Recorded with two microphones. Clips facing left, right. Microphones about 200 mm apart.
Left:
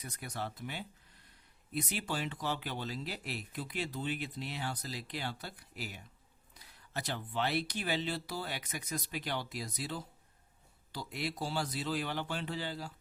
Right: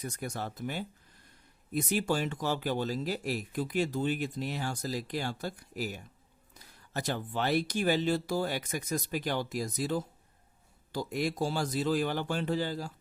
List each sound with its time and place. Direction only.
0.0 s speech: 45° right (ahead or behind)